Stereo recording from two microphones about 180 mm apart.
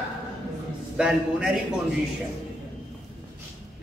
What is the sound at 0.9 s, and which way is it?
Speech, 5° right (ahead or behind).